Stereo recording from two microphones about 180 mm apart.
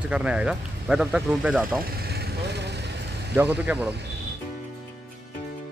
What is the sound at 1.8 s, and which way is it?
Vehicle, 60° right (ahead or behind).